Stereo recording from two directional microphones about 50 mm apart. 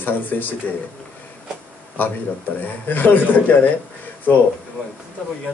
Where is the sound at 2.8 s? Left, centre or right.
Left.